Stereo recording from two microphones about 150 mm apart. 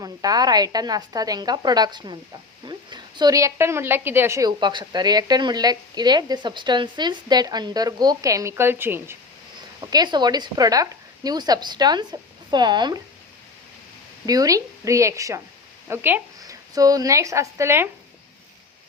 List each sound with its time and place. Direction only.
0.0 s a woman's voice: 25° right (ahead or behind)
9.8 s a woman's voice: 25° right (ahead or behind)
14.3 s a woman's voice: 25° right (ahead or behind)
15.9 s a sound: 15° right (ahead or behind)
16.7 s a woman's voice: 25° right (ahead or behind)